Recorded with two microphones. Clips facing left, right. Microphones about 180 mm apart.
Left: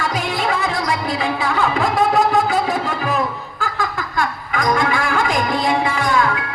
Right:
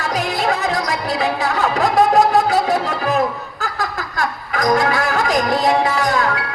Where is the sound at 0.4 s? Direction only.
40° right (ahead or behind).